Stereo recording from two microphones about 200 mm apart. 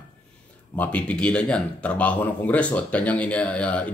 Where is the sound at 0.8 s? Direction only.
5° left (ahead or behind).